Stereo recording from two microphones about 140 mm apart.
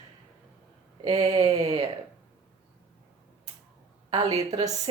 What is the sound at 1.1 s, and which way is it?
Speech, 30° right (ahead or behind).